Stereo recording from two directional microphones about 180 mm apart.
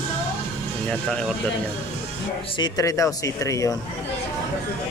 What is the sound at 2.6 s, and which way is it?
Speech, 15° left (ahead or behind).